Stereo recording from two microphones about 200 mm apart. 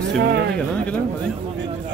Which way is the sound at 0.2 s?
55° right (ahead or behind).